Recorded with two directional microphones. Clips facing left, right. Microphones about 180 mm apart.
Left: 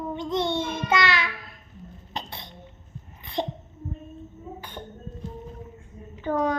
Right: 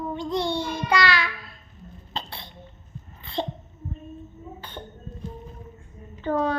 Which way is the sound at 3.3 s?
20° left (ahead or behind).